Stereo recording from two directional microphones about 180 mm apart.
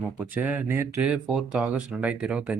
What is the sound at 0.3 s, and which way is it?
Speech, 10° right (ahead or behind).